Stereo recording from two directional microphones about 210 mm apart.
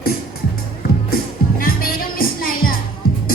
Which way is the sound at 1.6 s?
45° left (ahead or behind).